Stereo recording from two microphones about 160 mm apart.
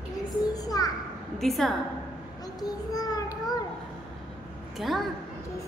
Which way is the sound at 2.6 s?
25° left (ahead or behind).